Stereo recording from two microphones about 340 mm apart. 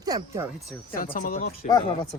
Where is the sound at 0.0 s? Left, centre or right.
Centre.